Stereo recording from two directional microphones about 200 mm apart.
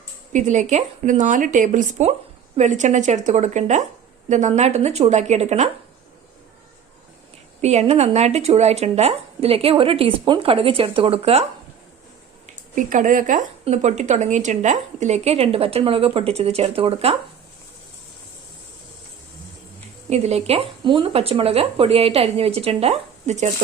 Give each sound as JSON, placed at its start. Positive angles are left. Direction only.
{"t": 0.3, "sound": "speech", "side_deg": -40}
{"t": 7.6, "sound": "speech", "side_deg": -35}
{"t": 12.7, "sound": "speech", "side_deg": -40}
{"t": 20.1, "sound": "speech", "side_deg": -30}